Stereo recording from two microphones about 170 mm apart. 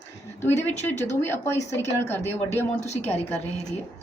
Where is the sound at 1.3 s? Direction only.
15° left (ahead or behind).